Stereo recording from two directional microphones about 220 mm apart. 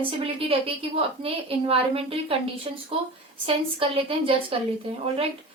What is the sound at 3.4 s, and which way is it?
A woman's voice, 25° right (ahead or behind).